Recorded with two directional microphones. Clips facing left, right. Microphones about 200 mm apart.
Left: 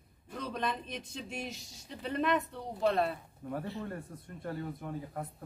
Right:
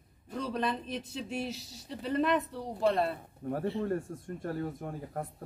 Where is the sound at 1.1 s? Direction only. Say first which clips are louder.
Right 5 dB; 35° right (ahead or behind).